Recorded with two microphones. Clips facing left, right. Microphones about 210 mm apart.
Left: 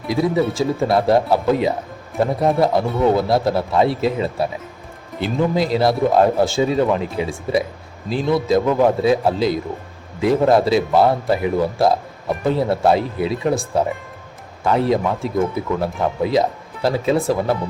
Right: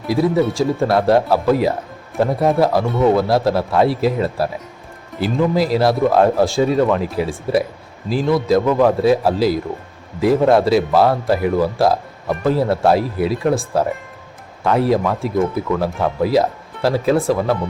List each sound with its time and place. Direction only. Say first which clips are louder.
0.1 s speech: right 2 dB; centre (ahead or behind)